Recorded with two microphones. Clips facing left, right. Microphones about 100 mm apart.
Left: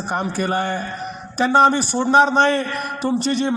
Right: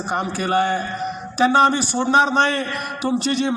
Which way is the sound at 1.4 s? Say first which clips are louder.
Left 1 dB; centre (ahead or behind).